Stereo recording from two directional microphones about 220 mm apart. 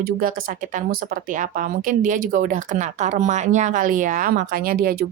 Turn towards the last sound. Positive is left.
turn(degrees=-45)  # may be behind; listen again after turning